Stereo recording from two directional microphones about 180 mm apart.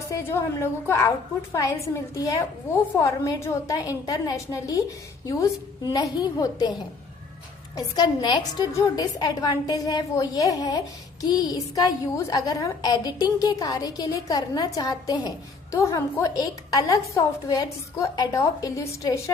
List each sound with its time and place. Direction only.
0.1 s a woman's voice: 15° left (ahead or behind)
7.8 s a woman's voice: 25° left (ahead or behind)